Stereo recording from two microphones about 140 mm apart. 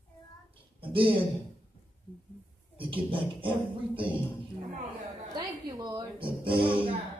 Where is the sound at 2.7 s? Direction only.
40° right (ahead or behind).